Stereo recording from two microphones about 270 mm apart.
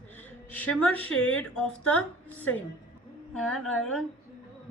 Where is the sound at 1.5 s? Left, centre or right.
Centre.